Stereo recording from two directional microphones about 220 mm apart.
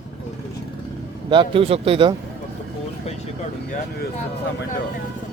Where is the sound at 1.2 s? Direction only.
20° right (ahead or behind).